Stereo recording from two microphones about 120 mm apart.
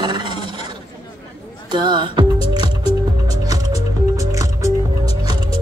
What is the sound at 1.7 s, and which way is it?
Speech, 40° right (ahead or behind).